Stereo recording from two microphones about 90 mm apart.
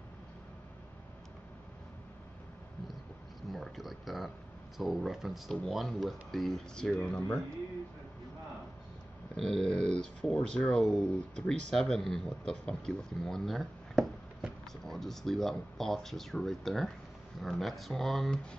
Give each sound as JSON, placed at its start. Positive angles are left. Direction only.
{"t": 3.5, "sound": "speech", "side_deg": 0}
{"t": 9.4, "sound": "speech", "side_deg": 10}